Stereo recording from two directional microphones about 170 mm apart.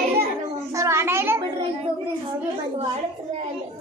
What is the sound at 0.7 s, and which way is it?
Speech, 15° right (ahead or behind).